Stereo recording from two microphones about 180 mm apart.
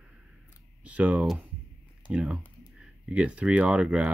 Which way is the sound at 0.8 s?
5° right (ahead or behind).